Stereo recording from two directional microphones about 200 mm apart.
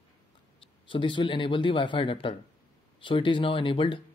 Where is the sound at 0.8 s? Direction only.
25° left (ahead or behind).